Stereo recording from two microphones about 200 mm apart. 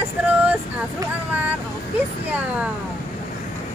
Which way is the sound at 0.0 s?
10° right (ahead or behind).